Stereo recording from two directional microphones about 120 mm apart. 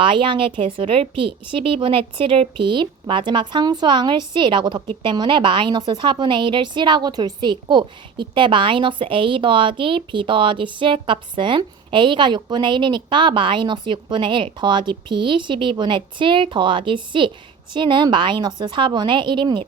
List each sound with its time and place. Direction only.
0.0 s a woman's voice: 45° right (ahead or behind)